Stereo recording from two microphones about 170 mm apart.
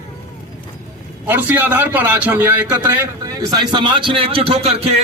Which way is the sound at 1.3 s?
10° right (ahead or behind).